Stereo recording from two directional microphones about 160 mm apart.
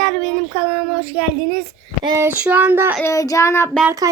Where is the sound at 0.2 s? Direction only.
Centre (ahead or behind).